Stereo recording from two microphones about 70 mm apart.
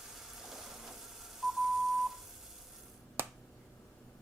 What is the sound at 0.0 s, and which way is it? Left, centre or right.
Telephone dialing, centre.